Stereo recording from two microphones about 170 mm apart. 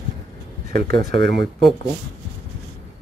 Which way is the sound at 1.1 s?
90° right.